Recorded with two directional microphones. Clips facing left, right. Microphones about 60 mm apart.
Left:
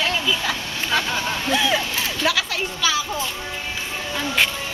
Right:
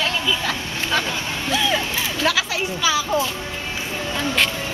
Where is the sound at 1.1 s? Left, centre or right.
Left.